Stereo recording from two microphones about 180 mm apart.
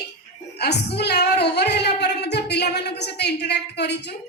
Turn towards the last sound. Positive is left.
turn(degrees=70)  # may be behind; listen again after turning